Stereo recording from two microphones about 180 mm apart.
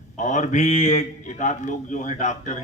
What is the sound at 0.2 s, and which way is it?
A man's voice, 45° left (ahead or behind).